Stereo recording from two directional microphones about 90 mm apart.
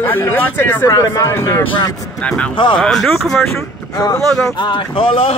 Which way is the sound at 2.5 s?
60° left (ahead or behind).